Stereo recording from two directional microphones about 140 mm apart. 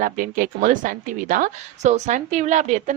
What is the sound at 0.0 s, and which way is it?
A woman's voice, 75° right (ahead or behind).